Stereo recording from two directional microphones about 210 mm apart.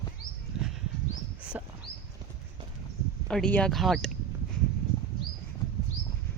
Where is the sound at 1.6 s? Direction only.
10° right (ahead or behind).